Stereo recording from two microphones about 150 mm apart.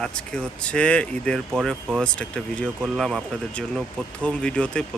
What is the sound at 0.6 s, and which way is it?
Speech, 10° left (ahead or behind).